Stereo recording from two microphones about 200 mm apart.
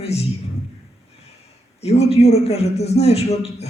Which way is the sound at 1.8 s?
30° left (ahead or behind).